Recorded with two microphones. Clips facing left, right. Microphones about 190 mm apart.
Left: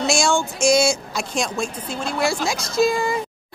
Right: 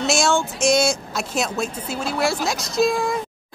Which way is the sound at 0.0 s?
Centre (ahead or behind).